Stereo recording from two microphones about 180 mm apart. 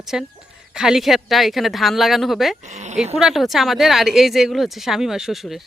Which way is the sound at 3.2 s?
Centre (ahead or behind).